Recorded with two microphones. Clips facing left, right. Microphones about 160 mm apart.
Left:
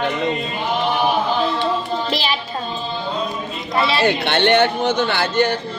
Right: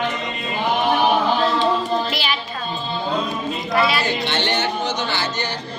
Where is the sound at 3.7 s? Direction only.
25° left (ahead or behind).